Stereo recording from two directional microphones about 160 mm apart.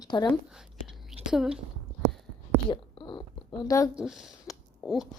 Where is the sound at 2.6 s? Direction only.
30° left (ahead or behind).